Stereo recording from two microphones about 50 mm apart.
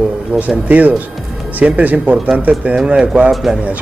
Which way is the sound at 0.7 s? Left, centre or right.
Right.